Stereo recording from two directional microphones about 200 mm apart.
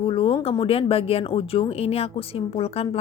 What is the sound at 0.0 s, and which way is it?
A woman's voice, 25° left (ahead or behind).